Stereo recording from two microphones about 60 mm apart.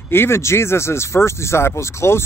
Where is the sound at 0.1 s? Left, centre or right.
Left.